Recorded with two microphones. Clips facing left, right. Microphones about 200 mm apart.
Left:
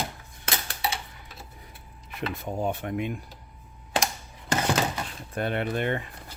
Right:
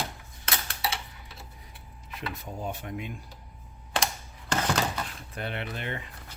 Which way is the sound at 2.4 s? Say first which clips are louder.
Left 9 dB; 60° left (ahead or behind).